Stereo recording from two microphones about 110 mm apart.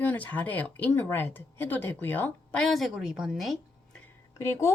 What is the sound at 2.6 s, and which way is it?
Speech, centre (ahead or behind).